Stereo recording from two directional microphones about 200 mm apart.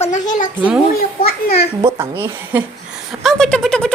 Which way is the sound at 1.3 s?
50° left (ahead or behind).